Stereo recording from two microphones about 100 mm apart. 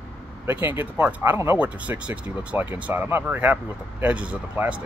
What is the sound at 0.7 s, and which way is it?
Speech, 20° right (ahead or behind).